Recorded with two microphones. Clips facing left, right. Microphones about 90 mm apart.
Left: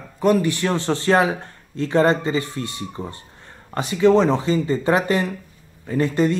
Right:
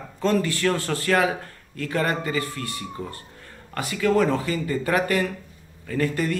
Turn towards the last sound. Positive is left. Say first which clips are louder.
# left 5 dB
turn(degrees=25)  # may be behind; listen again after turning